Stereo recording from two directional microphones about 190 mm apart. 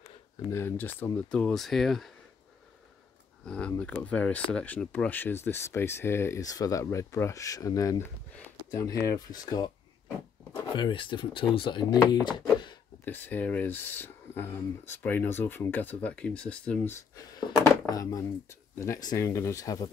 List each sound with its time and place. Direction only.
0.5 s speech: 10° left (ahead or behind)
3.4 s speech: 5° left (ahead or behind)
9.0 s a sound: 20° left (ahead or behind)
10.8 s speech: 25° left (ahead or behind)
13.0 s speech: 10° left (ahead or behind)